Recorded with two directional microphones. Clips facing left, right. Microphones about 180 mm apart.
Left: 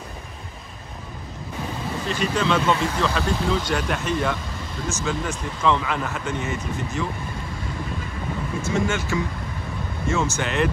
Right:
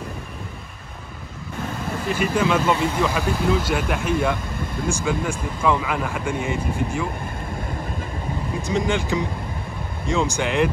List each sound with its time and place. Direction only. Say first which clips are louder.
2.0 s speech: right 2 dB; 10° right (ahead or behind)
8.6 s speech: right 2 dB; 15° right (ahead or behind)